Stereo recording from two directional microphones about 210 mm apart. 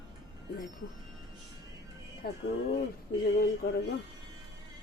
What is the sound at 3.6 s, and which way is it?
Speech, 50° left (ahead or behind).